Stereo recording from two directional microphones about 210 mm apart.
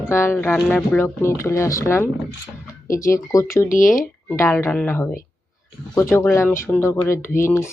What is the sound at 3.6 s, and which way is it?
Speech, 40° left (ahead or behind).